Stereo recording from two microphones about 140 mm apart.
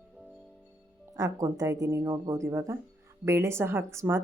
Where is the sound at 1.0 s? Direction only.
25° right (ahead or behind).